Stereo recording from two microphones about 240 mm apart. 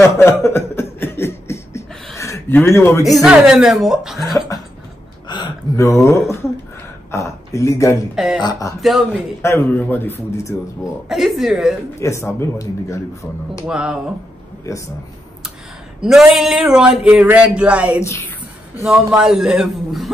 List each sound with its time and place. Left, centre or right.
0.0 s chuckle: centre
2.1 s a man's voice: centre
3.2 s a man's voice: centre
5.3 s a sound: centre
7.1 s a sound: centre
8.4 s speech: centre
8.8 s a man's voice: centre
9.4 s speech: centre
11.1 s a man's voice: centre
12.0 s speech: centre
13.7 s a man's voice: centre
16.0 s a man's voice: centre